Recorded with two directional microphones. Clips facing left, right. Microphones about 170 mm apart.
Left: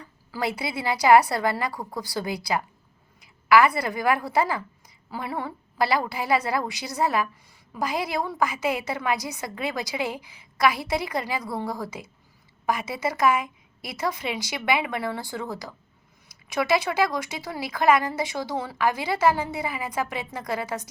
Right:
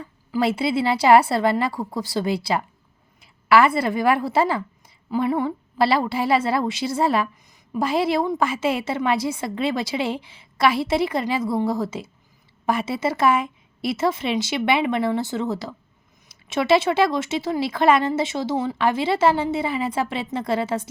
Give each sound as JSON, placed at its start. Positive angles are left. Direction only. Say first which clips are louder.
{"t": 0.0, "sound": "a woman's voice", "louder": "right 7 dB", "side_deg": -25}